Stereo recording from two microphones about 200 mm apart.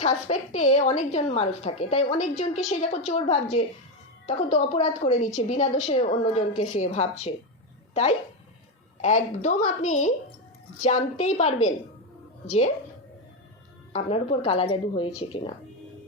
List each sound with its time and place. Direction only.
0.0 s a woman's voice: 35° left (ahead or behind)
9.0 s a woman's voice: 35° left (ahead or behind)
13.9 s a woman's voice: 30° left (ahead or behind)